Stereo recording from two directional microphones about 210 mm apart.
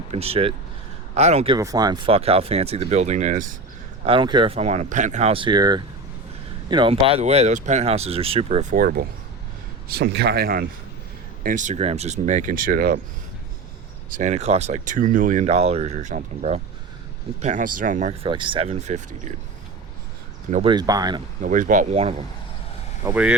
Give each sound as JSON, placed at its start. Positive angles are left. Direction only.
{"t": 0.1, "sound": "speech", "side_deg": -30}
{"t": 1.5, "sound": "speech", "side_deg": -15}
{"t": 4.0, "sound": "speech", "side_deg": -25}
{"t": 8.8, "sound": "speech", "side_deg": -45}
{"t": 14.1, "sound": "speech", "side_deg": -35}
{"t": 18.3, "sound": "speech", "side_deg": -25}
{"t": 20.5, "sound": "speech", "side_deg": -30}
{"t": 20.7, "sound": "speech", "side_deg": -20}
{"t": 21.4, "sound": "speech", "side_deg": -40}
{"t": 23.0, "sound": "speech", "side_deg": -5}